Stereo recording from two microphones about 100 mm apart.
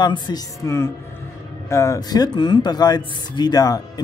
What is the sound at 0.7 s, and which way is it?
Speech, 25° left (ahead or behind).